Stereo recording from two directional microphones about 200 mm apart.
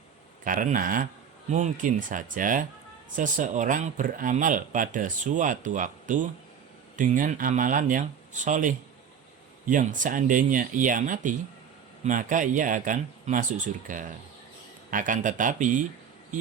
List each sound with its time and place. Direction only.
0.4 s speech: 40° right (ahead or behind)